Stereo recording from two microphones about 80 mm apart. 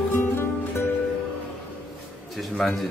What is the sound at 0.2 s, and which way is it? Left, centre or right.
Music, left.